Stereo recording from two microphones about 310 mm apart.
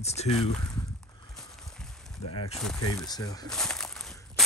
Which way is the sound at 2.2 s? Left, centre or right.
Left.